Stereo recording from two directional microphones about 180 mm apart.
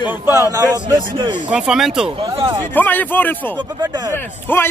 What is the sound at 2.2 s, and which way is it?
Speech, 25° right (ahead or behind).